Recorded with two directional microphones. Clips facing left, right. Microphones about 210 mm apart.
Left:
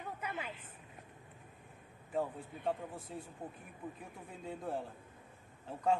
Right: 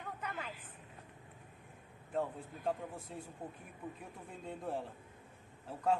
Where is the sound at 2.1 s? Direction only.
Centre (ahead or behind).